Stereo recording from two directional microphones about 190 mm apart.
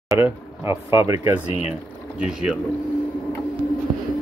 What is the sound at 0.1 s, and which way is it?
Speech, 15° right (ahead or behind).